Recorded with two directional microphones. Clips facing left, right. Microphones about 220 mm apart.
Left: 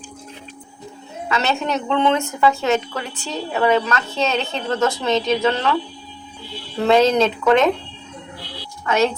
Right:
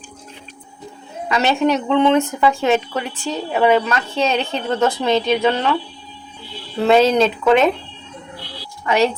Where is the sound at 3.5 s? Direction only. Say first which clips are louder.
Right 2 dB; 10° right (ahead or behind).